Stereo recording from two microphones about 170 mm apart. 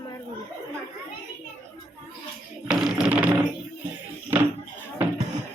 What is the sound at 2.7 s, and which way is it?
Music, 5° right (ahead or behind).